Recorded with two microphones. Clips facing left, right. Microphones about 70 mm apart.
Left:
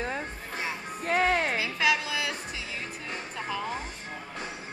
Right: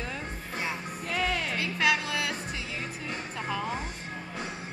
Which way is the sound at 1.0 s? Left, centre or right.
Left.